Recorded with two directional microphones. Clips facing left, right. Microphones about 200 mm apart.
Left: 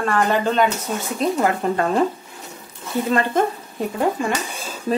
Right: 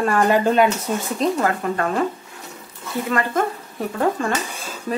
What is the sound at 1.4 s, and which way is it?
Speech, 25° left (ahead or behind).